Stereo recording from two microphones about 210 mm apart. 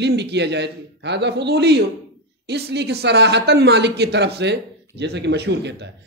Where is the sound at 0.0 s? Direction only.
55° right (ahead or behind).